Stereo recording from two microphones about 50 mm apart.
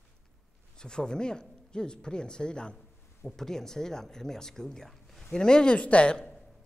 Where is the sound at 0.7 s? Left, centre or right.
Centre.